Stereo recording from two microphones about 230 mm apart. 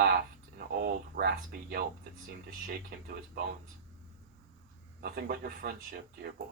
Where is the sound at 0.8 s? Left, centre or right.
Right.